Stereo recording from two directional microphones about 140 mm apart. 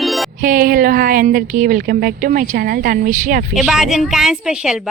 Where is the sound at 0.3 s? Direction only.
80° right.